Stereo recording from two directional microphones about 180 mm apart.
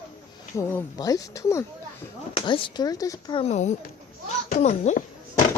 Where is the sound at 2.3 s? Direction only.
30° left (ahead or behind).